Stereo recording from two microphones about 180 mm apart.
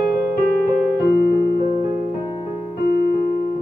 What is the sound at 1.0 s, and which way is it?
Keyboard, 60° left (ahead or behind).